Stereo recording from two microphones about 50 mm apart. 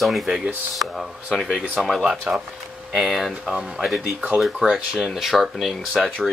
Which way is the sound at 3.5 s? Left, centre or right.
Centre.